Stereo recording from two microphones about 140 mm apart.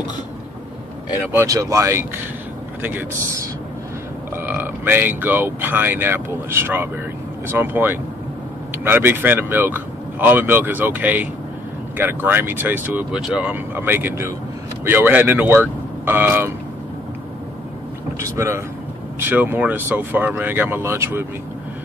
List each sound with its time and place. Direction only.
1.3 s speech: 20° right (ahead or behind)
4.4 s speech: 15° right (ahead or behind)
18.2 s speech: 20° right (ahead or behind)